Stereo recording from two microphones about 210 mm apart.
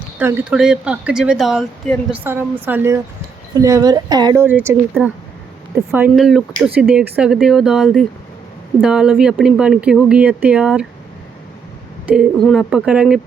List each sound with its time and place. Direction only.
0.2 s speech: 10° right (ahead or behind)
5.9 s speech: 5° right (ahead or behind)
12.0 s speech: 5° right (ahead or behind)